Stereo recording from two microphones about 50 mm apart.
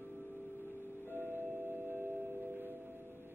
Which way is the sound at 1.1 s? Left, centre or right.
Right.